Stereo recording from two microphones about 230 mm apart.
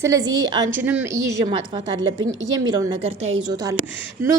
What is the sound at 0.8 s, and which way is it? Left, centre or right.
A woman's voice, centre.